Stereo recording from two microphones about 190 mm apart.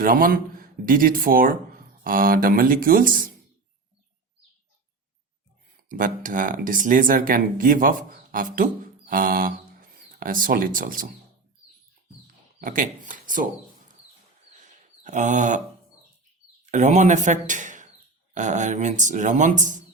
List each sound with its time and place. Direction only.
0.0 s speech: 50° right (ahead or behind)
5.7 s speech: 45° right (ahead or behind)
12.5 s speech: 45° right (ahead or behind)
14.6 s a sound: 40° right (ahead or behind)
16.7 s speech: 40° right (ahead or behind)